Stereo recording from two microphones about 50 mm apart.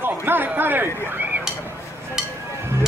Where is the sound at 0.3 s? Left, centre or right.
Right.